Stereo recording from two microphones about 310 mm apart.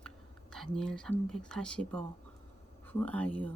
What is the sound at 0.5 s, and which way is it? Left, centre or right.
Speech, centre.